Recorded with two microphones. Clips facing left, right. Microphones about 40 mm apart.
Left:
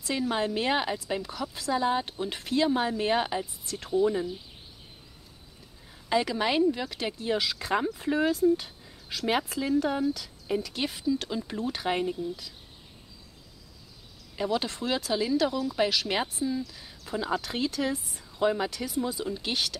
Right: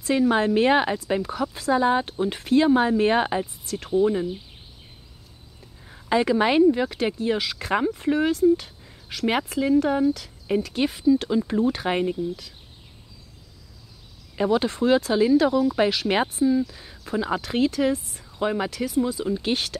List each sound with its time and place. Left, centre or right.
0.1 s speech: centre
5.9 s a woman's voice: right
7.9 s speech: right
8.5 s speech: centre
9.6 s speech: centre
10.1 s speech: right
14.3 s speech: centre
17.4 s speech: right
18.3 s speech: centre